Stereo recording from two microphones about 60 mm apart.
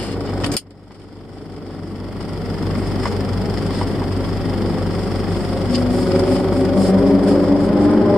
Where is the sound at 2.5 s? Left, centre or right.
Centre.